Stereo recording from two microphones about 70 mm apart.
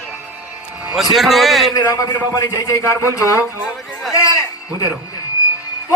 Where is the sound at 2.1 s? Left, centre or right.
Left.